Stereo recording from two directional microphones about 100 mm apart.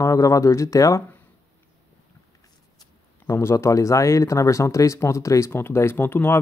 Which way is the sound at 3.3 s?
25° left (ahead or behind).